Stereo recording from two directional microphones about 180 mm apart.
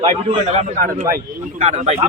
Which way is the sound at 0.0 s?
35° right (ahead or behind).